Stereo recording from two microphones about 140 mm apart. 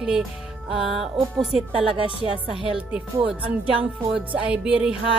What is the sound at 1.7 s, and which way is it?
Speech, 40° right (ahead or behind).